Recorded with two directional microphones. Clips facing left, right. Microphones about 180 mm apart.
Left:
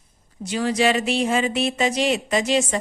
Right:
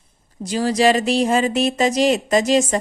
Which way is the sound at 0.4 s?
35° right (ahead or behind).